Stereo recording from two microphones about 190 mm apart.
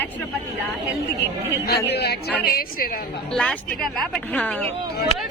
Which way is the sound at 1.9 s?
60° left (ahead or behind).